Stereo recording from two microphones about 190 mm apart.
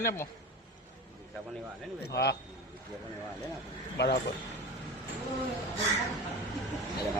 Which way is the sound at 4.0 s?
60° left (ahead or behind).